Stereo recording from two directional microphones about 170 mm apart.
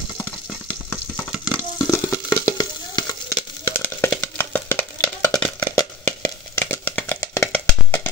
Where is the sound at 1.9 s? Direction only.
15° left (ahead or behind).